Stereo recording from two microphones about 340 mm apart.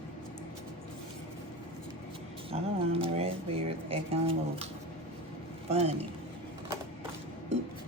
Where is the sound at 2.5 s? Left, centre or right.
Centre.